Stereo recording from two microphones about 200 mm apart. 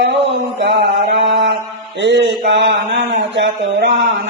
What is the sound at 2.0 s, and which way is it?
Speech, 65° right (ahead or behind).